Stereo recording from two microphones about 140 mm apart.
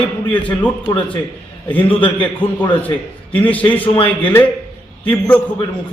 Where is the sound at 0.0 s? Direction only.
10° left (ahead or behind).